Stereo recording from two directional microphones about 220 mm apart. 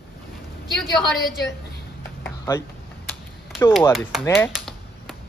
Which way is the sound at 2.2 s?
15° left (ahead or behind).